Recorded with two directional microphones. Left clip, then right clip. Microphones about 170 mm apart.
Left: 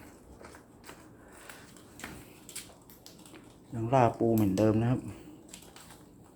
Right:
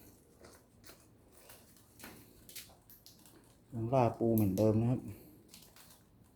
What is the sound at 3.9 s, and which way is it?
Speech, 5° right (ahead or behind).